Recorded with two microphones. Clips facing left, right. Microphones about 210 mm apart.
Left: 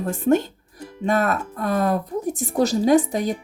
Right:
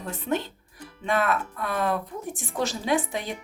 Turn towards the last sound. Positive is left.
turn(degrees=40)  # may be behind; listen again after turning